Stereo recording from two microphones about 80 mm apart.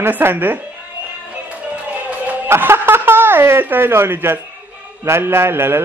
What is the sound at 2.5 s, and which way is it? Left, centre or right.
Speech, right.